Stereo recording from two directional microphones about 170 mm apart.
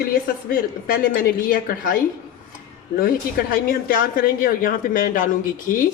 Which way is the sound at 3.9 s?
55° left (ahead or behind).